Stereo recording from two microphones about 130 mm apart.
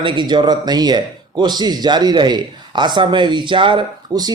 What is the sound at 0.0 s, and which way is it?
A man's voice, 35° right (ahead or behind).